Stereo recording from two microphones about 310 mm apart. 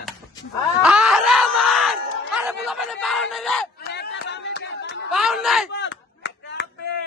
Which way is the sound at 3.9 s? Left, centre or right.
Left.